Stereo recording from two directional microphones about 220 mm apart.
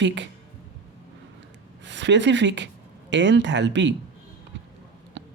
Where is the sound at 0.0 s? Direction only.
55° right (ahead or behind).